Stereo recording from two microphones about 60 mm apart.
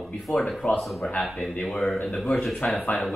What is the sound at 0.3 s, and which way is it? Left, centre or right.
Speech, centre.